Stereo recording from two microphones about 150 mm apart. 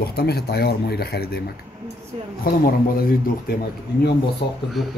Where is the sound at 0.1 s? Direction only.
90° left.